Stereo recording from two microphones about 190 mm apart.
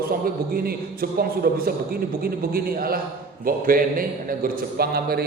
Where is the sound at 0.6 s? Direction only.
55° right (ahead or behind).